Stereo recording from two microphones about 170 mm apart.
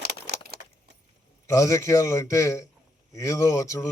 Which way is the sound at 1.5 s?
20° left (ahead or behind).